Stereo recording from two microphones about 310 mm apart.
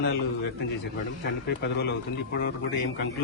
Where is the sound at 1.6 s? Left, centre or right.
Left.